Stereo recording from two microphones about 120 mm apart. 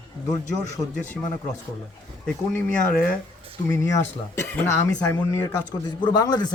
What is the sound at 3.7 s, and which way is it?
Speech, 25° left (ahead or behind).